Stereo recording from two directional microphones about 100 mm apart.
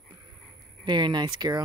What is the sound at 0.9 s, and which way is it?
Speech, 50° right (ahead or behind).